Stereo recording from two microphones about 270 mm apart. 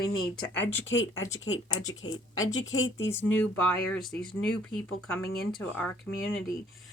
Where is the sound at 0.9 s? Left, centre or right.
Left.